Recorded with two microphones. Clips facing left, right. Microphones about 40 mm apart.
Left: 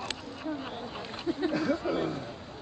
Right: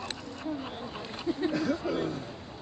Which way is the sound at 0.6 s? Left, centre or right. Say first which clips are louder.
Even; centre.